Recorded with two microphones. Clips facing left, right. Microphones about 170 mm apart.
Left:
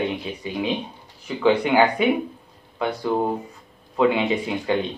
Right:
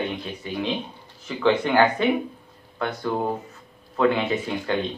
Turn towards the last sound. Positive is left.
turn(degrees=10)  # may be behind; listen again after turning